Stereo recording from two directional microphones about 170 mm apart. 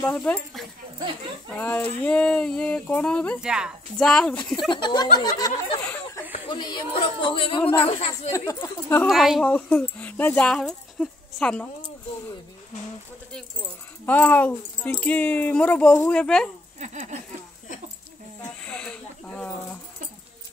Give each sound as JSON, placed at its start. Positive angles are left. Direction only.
{"t": 0.0, "sound": "speech", "side_deg": 5}
{"t": 0.9, "sound": "speech", "side_deg": -25}
{"t": 1.5, "sound": "speech", "side_deg": 10}
{"t": 3.3, "sound": "speech", "side_deg": -5}
{"t": 4.6, "sound": "speech", "side_deg": 25}
{"t": 8.3, "sound": "speech", "side_deg": 20}
{"t": 9.0, "sound": "speech", "side_deg": 0}
{"t": 14.0, "sound": "speech", "side_deg": 10}
{"t": 16.8, "sound": "a sound", "side_deg": -45}
{"t": 18.7, "sound": "speech", "side_deg": 5}